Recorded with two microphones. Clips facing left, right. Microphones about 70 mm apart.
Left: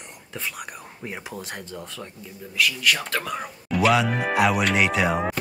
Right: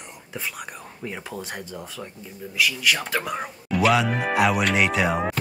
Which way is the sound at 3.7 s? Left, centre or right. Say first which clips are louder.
Even; centre.